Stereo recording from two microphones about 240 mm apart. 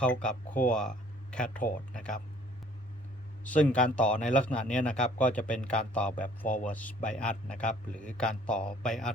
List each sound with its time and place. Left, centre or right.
0.0 s speech: centre
1.6 s speech: left
3.4 s a man's voice: centre